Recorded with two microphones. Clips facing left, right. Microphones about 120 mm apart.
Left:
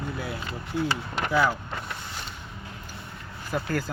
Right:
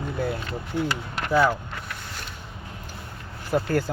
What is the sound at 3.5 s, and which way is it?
Speech, 40° right (ahead or behind).